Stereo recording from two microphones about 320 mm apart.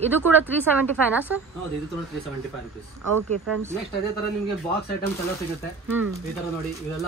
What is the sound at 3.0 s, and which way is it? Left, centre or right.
Speech, right.